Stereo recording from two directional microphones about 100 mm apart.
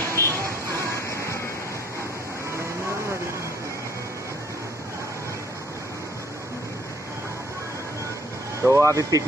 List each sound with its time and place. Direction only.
0.2 s music: 25° left (ahead or behind)
8.6 s speech: 30° right (ahead or behind)